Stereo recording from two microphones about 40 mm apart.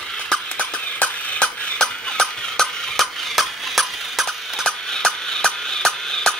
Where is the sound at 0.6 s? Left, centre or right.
Left.